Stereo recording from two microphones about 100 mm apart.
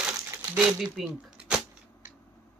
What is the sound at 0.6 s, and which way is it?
Speech, 5° right (ahead or behind).